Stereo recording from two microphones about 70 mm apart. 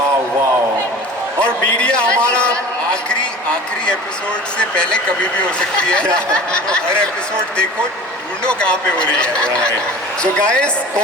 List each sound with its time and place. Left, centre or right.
1.4 s a man's voice: centre
4.5 s speech: centre
8.4 s speech: centre